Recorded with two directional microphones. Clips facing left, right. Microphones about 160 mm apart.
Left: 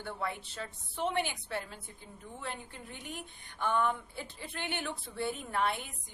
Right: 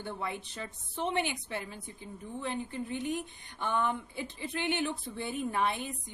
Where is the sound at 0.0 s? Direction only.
20° right (ahead or behind).